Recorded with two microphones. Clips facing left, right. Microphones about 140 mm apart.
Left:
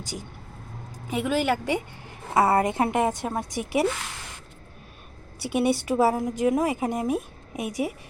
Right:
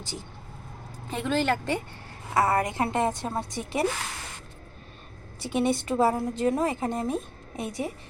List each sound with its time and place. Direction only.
0.0 s a woman's voice: 15° left (ahead or behind)
2.3 s a woman's voice: 25° left (ahead or behind)
5.4 s a woman's voice: 10° left (ahead or behind)